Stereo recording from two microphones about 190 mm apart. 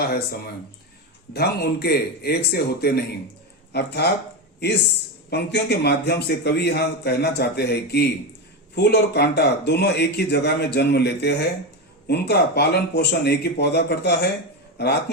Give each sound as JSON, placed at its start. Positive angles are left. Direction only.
{"t": 0.0, "sound": "a man's voice", "side_deg": 55}
{"t": 5.3, "sound": "a man's voice", "side_deg": 60}